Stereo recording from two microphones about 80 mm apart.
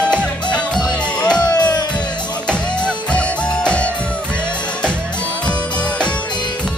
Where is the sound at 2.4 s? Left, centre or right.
Centre.